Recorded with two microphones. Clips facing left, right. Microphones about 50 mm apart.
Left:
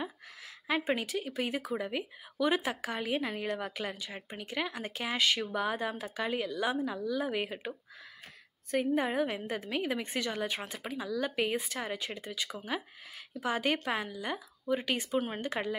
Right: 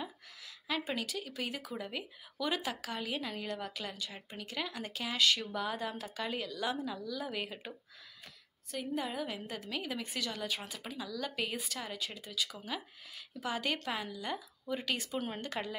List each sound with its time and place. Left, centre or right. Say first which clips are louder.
0.7 s speech: left 5 dB; left
8.7 s a woman's voice: left 8 dB; left
13.8 s speech: left 4 dB; left